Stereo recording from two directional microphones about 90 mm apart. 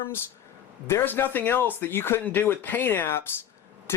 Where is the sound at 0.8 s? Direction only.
25° left (ahead or behind).